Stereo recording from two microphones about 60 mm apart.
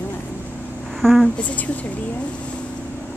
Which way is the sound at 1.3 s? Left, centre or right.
Left.